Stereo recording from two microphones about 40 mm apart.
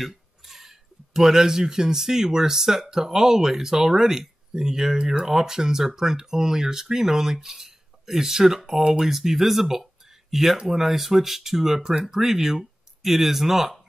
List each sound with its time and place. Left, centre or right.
0.0 s speech: centre
9.1 s speech: centre